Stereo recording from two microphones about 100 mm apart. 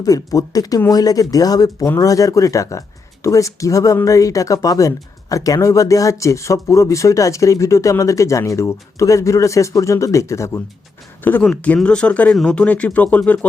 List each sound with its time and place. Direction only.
0.0 s speech: 35° left (ahead or behind)
11.2 s speech: 20° left (ahead or behind)